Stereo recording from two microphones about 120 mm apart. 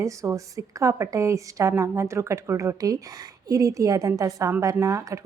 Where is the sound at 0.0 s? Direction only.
25° right (ahead or behind).